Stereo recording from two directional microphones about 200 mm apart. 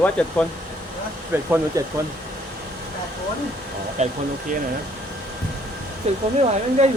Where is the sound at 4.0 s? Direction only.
35° right (ahead or behind).